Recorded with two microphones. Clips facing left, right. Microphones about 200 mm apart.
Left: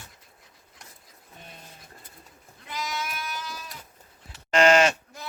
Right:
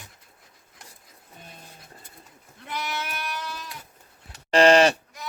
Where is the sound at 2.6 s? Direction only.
60° right (ahead or behind).